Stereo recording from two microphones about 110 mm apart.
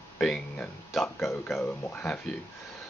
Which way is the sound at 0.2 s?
5° left (ahead or behind).